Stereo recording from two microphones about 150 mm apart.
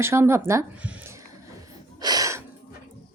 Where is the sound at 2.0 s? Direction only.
25° right (ahead or behind).